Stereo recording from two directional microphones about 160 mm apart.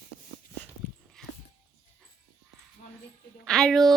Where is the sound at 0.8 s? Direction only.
10° left (ahead or behind).